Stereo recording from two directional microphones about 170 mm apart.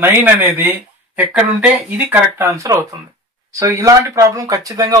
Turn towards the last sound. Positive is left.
turn(degrees=-20)  # may be behind; listen again after turning